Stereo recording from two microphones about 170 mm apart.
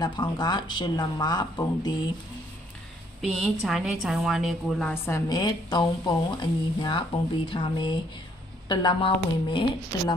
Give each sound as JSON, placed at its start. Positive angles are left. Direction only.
{"t": 0.0, "sound": "a woman's voice", "side_deg": 25}
{"t": 3.2, "sound": "a woman's voice", "side_deg": 0}
{"t": 5.0, "sound": "a woman's voice", "side_deg": 20}